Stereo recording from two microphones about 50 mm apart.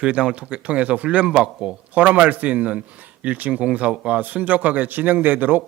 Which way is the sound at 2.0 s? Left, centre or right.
Right.